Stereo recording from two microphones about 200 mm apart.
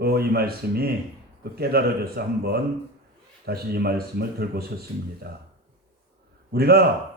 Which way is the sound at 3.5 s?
50° right (ahead or behind).